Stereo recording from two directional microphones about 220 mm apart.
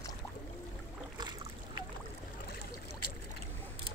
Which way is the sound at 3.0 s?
90° left.